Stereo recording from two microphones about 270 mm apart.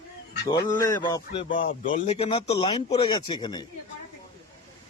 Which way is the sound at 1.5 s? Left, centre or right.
Left.